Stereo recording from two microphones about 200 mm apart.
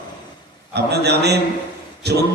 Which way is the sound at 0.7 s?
55° right (ahead or behind).